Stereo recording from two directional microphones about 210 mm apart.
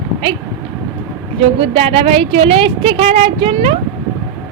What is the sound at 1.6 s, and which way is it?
A woman's voice, 25° right (ahead or behind).